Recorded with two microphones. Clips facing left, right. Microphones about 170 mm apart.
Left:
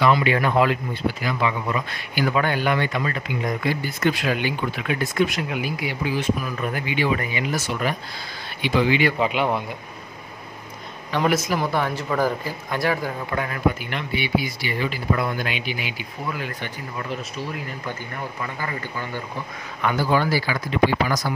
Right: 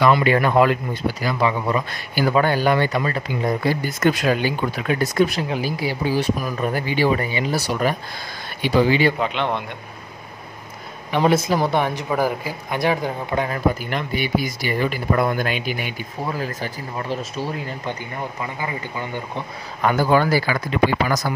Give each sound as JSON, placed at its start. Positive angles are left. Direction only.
{"t": 0.0, "sound": "speech", "side_deg": -45}
{"t": 3.8, "sound": "speech", "side_deg": -45}
{"t": 9.2, "sound": "speech", "side_deg": 5}
{"t": 11.1, "sound": "speech", "side_deg": -25}
{"t": 11.8, "sound": "speech", "side_deg": -15}
{"t": 13.7, "sound": "speech", "side_deg": -40}
{"t": 18.4, "sound": "speech", "side_deg": -15}
{"t": 19.8, "sound": "speech", "side_deg": -45}